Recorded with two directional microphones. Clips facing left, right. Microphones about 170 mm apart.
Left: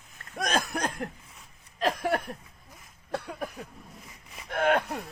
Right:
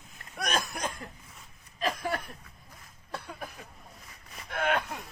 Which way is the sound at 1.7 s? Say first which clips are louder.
Left 4 dB; 65° left (ahead or behind).